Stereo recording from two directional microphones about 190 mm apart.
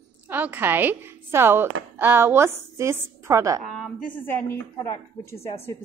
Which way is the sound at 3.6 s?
5° left (ahead or behind).